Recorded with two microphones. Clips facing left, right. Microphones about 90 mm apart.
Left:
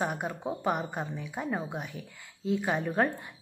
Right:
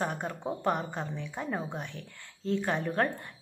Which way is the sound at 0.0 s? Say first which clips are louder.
Left 1 dB; 5° left (ahead or behind).